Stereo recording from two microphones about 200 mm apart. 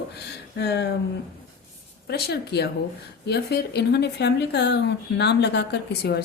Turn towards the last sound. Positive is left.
turn(degrees=55)  # may be behind; listen again after turning